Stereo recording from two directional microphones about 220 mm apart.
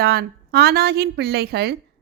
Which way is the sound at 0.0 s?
45° right (ahead or behind).